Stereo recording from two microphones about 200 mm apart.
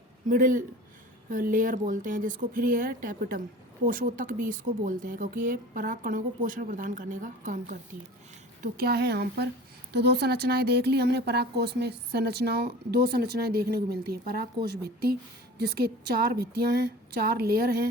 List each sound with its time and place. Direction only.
0.3 s speech: 40° right (ahead or behind)
8.6 s speech: 50° right (ahead or behind)